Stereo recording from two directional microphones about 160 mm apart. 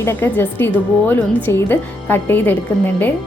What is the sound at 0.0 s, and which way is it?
A woman's voice, 15° left (ahead or behind).